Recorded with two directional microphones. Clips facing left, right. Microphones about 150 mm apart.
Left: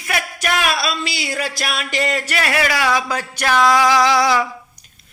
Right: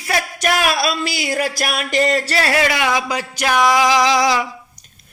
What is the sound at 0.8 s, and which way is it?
Music, 50° right (ahead or behind).